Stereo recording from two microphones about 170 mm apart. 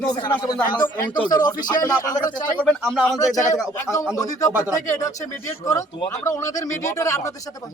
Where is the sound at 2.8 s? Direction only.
Centre (ahead or behind).